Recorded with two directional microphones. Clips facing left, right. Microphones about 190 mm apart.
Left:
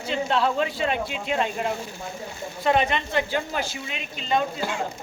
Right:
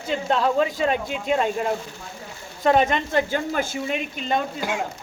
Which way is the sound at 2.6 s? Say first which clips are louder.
Right 3 dB; 45° right (ahead or behind).